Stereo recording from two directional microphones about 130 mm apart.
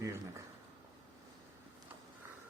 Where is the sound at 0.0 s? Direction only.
20° right (ahead or behind).